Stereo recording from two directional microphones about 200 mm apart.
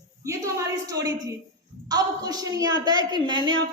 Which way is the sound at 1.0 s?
15° right (ahead or behind).